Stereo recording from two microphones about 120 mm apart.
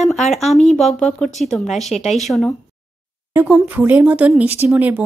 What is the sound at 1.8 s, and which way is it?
Speech, 70° left (ahead or behind).